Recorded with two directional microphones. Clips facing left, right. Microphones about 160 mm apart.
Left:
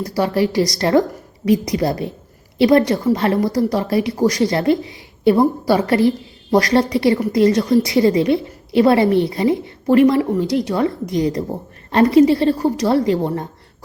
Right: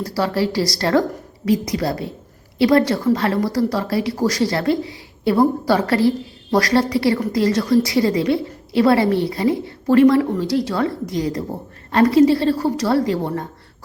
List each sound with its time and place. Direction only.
0.0 s a woman's voice: 20° left (ahead or behind)